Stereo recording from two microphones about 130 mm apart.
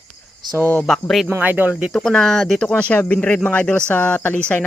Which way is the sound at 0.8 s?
Centre (ahead or behind).